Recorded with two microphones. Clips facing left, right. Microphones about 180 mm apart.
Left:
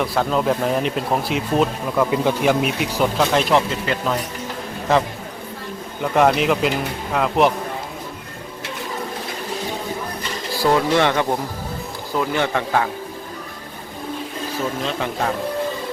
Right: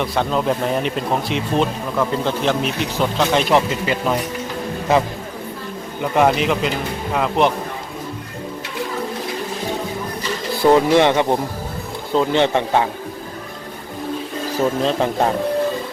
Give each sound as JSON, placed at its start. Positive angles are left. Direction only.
{"t": 0.0, "sound": "speech", "side_deg": 0}
{"t": 6.0, "sound": "speech", "side_deg": 0}
{"t": 10.6, "sound": "a man's voice", "side_deg": -20}
{"t": 14.8, "sound": "speech", "side_deg": -35}